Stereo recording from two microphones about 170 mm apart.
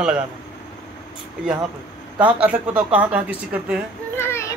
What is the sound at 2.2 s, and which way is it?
Speech, 10° right (ahead or behind).